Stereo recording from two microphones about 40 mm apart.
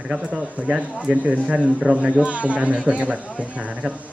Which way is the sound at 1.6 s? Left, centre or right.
Centre.